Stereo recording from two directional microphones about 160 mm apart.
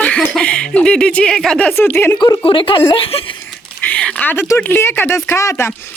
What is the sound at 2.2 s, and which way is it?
Speech, 30° left (ahead or behind).